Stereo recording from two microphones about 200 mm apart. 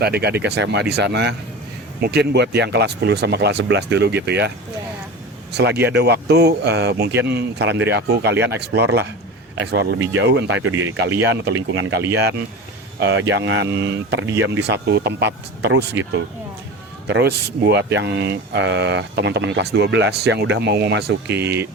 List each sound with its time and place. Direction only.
0.0 s speech: 55° right (ahead or behind); by 11.9 s 70° right (ahead or behind)
13.0 s speech: 60° right (ahead or behind)
17.1 s speech: 55° right (ahead or behind)
21.4 s speech: 10° right (ahead or behind)